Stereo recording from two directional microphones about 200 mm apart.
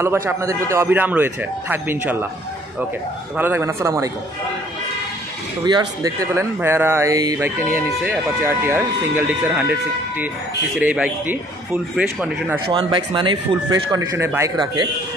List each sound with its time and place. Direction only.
0.0 s speech: 10° right (ahead or behind)
3.3 s speech: 10° right (ahead or behind)
5.7 s speech: 20° right (ahead or behind)
12.6 s speech: 25° right (ahead or behind)
13.9 s speech: 15° right (ahead or behind)